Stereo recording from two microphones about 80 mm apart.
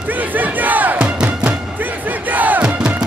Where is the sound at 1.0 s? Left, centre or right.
Centre.